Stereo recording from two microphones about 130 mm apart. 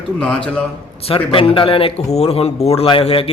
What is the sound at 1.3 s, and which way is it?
Speech, 40° left (ahead or behind).